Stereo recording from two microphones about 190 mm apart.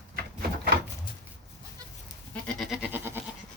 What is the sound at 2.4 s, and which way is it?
Goat, centre (ahead or behind).